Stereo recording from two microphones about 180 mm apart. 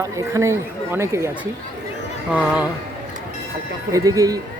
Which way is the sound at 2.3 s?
5° right (ahead or behind).